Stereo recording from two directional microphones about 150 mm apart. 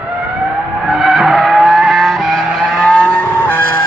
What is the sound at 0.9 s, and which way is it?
Vehicle, centre (ahead or behind).